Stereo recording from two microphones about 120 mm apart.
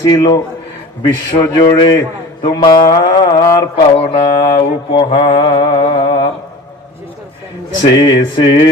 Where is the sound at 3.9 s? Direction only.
50° left (ahead or behind).